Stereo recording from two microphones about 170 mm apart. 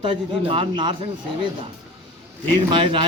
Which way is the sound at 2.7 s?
30° right (ahead or behind).